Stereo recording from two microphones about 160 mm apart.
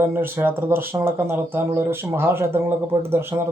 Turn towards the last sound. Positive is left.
turn(degrees=-15)  # may be behind; listen again after turning